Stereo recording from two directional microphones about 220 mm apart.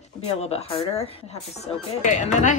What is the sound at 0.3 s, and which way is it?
Speech, 30° left (ahead or behind).